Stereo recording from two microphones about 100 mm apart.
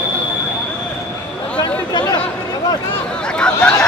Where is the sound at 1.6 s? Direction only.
45° left (ahead or behind).